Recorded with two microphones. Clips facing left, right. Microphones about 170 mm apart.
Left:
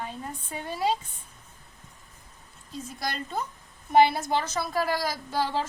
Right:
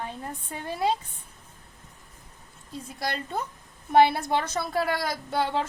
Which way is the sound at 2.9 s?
60° right (ahead or behind).